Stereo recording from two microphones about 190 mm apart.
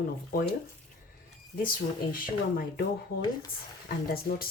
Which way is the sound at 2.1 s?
50° left (ahead or behind).